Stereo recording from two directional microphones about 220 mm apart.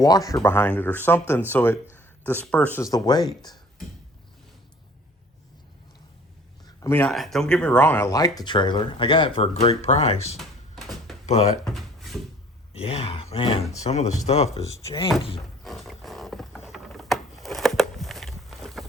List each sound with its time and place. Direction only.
0.0 s speech: 15° left (ahead or behind)
6.7 s speech: 15° left (ahead or behind)
10.3 s a sound: centre (ahead or behind)
11.3 s speech: 30° left (ahead or behind)
11.6 s a sound: centre (ahead or behind)
12.7 s speech: 25° left (ahead or behind)
15.6 s wild animals: centre (ahead or behind)